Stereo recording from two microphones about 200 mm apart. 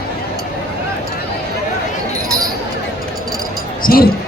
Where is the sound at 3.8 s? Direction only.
45° left (ahead or behind).